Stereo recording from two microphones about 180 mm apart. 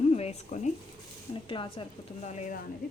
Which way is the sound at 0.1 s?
35° left (ahead or behind).